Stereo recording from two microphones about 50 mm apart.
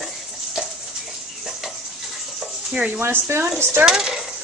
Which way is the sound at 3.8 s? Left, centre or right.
Centre.